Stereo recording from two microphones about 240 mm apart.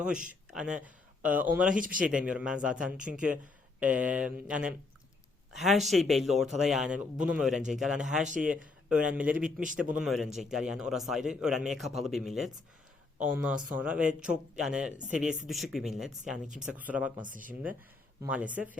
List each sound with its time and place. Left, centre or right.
0.3 s speech: centre
1.7 s speech: right
2.0 s a man's voice: centre
17.2 s speech: right
18.2 s speech: centre